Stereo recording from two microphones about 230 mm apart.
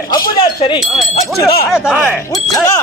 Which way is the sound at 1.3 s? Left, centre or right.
Centre.